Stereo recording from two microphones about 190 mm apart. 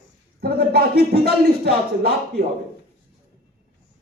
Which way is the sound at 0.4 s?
55° right (ahead or behind).